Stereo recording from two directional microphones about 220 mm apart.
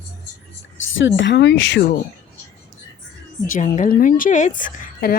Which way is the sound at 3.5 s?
35° left (ahead or behind).